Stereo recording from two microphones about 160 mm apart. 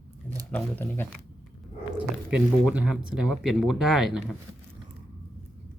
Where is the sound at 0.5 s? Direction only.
10° left (ahead or behind).